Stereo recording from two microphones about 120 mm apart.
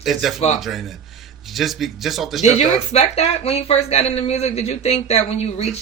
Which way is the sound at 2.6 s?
65° left (ahead or behind).